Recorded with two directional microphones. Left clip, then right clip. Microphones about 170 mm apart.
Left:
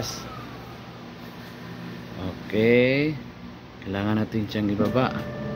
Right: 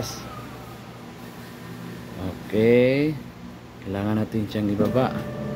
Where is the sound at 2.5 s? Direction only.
15° right (ahead or behind).